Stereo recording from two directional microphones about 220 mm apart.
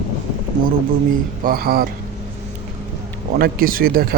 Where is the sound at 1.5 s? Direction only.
45° right (ahead or behind).